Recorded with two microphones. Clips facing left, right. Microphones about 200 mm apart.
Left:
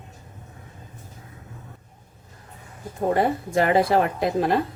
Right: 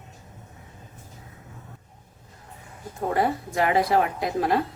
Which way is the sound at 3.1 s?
30° left (ahead or behind).